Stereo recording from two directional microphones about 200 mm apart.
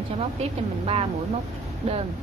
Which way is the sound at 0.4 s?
30° right (ahead or behind).